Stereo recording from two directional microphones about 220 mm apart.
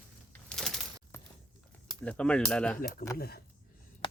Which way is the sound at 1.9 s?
5° left (ahead or behind).